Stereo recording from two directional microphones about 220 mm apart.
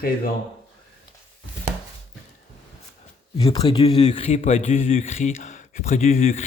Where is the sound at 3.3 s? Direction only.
25° left (ahead or behind).